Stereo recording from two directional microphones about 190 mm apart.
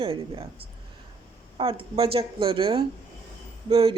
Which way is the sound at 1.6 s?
30° right (ahead or behind).